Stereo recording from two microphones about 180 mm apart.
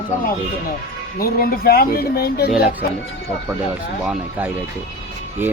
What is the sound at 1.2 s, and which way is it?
Speech, 55° left (ahead or behind).